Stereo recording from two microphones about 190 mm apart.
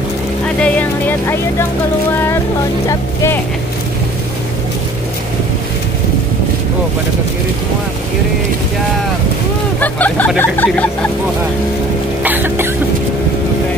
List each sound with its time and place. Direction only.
0.6 s speech: 10° left (ahead or behind)
2.9 s speech: 15° left (ahead or behind)
9.8 s speech: 10° left (ahead or behind)
12.2 s music: 10° right (ahead or behind)